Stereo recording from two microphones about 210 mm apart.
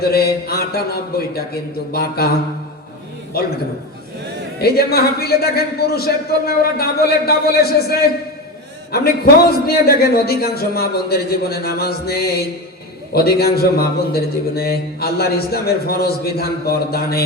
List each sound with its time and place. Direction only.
0.0 s a man's voice: 45° left (ahead or behind)
4.6 s a man's voice: 45° left (ahead or behind)